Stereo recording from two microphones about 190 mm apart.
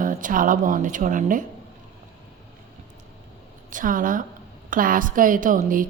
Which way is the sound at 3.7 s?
45° right (ahead or behind).